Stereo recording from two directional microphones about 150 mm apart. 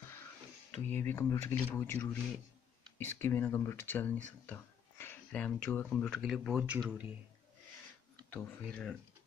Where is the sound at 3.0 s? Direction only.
15° left (ahead or behind); by 7.1 s 10° right (ahead or behind).